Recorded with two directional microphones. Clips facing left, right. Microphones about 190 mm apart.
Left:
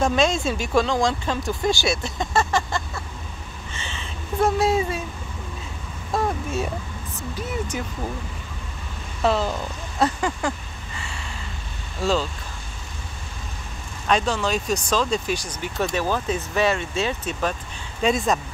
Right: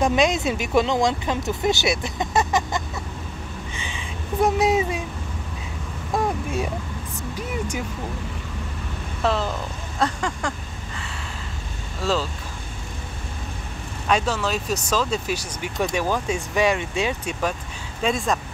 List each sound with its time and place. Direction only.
0.0 s speech: 15° right (ahead or behind)
3.7 s a sound: 15° right (ahead or behind)
6.2 s a sound: 10° right (ahead or behind)
7.3 s vehicle: 10° right (ahead or behind)
9.2 s speech: centre (ahead or behind)
12.0 s speech: centre (ahead or behind)
14.0 s speech: 5° right (ahead or behind)
18.0 s speech: centre (ahead or behind)